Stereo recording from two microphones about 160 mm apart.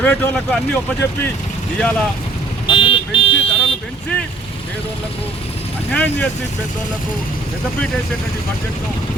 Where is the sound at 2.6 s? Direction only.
30° left (ahead or behind).